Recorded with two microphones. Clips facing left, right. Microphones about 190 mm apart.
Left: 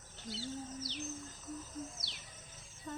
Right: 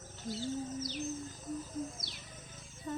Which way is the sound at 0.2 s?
45° right (ahead or behind).